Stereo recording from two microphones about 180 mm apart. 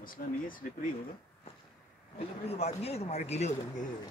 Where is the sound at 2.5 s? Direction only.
35° left (ahead or behind).